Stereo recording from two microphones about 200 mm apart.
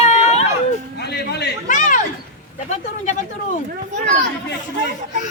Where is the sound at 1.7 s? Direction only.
40° left (ahead or behind).